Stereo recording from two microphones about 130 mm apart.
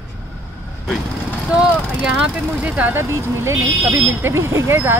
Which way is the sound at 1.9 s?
5° right (ahead or behind).